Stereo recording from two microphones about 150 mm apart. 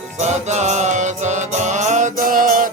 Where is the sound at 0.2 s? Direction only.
50° right (ahead or behind).